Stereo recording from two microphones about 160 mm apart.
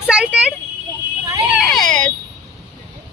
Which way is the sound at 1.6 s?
Centre (ahead or behind).